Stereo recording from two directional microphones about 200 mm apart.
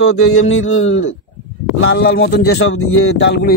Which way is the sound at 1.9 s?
55° left (ahead or behind).